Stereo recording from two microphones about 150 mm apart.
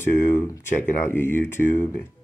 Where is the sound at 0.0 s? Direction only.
15° left (ahead or behind).